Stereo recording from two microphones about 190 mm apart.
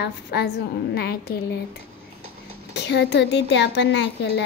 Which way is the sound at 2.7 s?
65° left (ahead or behind).